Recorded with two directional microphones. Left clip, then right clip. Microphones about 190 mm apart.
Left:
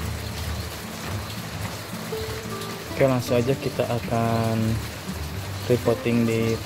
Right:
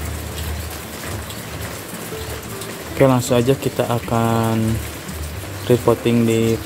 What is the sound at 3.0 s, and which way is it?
Speech, 25° right (ahead or behind).